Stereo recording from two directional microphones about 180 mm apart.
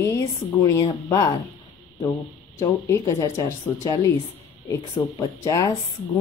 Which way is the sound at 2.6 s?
20° left (ahead or behind).